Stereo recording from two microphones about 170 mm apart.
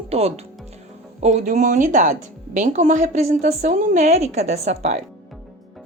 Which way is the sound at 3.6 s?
50° right (ahead or behind).